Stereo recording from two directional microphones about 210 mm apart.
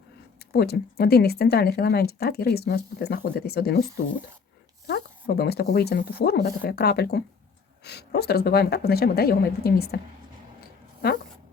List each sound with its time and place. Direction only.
0.5 s speech: 50° left (ahead or behind)
4.9 s speech: 45° left (ahead or behind)